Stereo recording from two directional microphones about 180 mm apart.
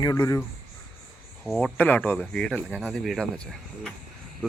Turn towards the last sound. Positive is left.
turn(degrees=5)  # may be behind; listen again after turning